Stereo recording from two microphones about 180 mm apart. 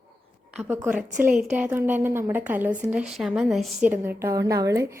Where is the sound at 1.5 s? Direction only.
10° right (ahead or behind).